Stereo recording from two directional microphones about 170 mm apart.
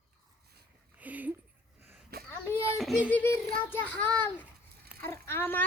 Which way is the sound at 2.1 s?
70° right (ahead or behind).